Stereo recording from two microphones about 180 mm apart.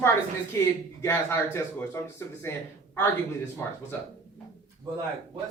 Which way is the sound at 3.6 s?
15° left (ahead or behind).